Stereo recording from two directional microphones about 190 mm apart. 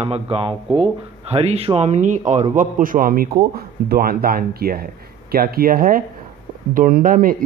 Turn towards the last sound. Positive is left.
turn(degrees=-50)  # may be behind; listen again after turning